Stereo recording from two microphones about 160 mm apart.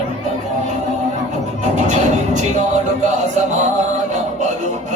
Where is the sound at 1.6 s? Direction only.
50° right (ahead or behind).